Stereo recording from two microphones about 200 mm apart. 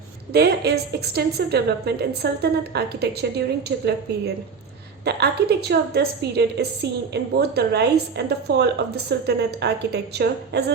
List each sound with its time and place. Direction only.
0.3 s a woman's voice: 55° right (ahead or behind)
5.0 s a woman's voice: 55° right (ahead or behind)